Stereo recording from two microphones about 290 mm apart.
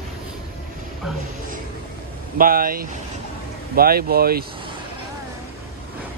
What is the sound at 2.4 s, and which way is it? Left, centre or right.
Speech, right.